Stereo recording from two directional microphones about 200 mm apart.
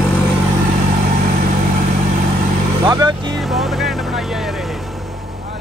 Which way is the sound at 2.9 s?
20° right (ahead or behind).